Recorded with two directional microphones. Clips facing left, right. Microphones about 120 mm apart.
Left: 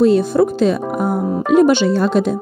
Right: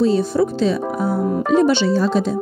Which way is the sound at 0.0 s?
55° left (ahead or behind).